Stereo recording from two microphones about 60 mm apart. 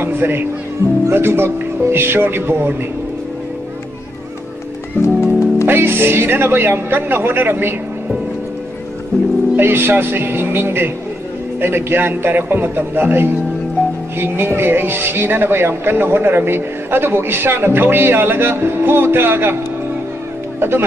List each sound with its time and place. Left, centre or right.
0.0 s speech: right
5.0 s music: left
5.7 s speech: right
9.6 s speech: right
20.5 s speech: right